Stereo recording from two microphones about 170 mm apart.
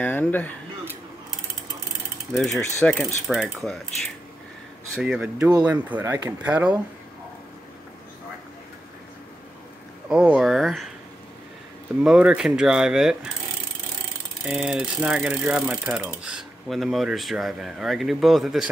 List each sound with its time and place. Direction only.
0.0 s speech: 10° left (ahead or behind)
2.3 s speech: centre (ahead or behind)
2.8 s mechanisms: 5° left (ahead or behind)
3.3 s speech: centre (ahead or behind)
5.7 s ratchet: 10° right (ahead or behind)
6.4 s ratchet: 5° right (ahead or behind)
10.0 s speech: 5° right (ahead or behind)
12.0 s speech: 5° right (ahead or behind)
14.4 s ratchet: 5° right (ahead or behind)
16.2 s speech: 5° right (ahead or behind)